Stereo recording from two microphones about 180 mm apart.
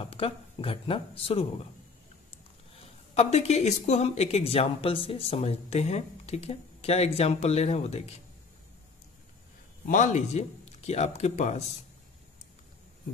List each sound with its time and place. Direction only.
0.0 s speech: 30° left (ahead or behind)
2.8 s speech: 35° left (ahead or behind)
9.8 s speech: 40° left (ahead or behind)